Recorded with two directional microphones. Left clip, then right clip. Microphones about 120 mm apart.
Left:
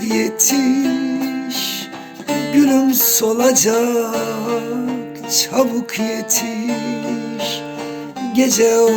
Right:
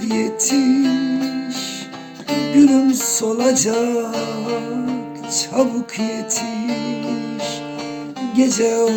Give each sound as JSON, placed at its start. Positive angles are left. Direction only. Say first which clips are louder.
{"t": 0.0, "sound": "music", "louder": "left 3 dB", "side_deg": -5}
{"t": 0.5, "sound": "music", "louder": "even", "side_deg": 40}
{"t": 2.5, "sound": "music", "louder": "right 1 dB", "side_deg": -5}
{"t": 4.1, "sound": "music", "louder": "left 3 dB", "side_deg": 40}
{"t": 5.3, "sound": "music", "louder": "left 2 dB", "side_deg": -10}
{"t": 6.7, "sound": "music", "louder": "left 1 dB", "side_deg": 40}
{"t": 8.3, "sound": "music", "louder": "left 3 dB", "side_deg": -5}